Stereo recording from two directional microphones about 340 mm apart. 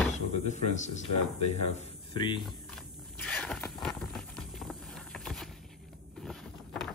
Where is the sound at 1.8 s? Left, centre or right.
Centre.